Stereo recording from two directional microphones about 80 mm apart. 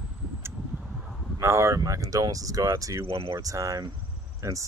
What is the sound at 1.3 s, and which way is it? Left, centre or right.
Speech, right.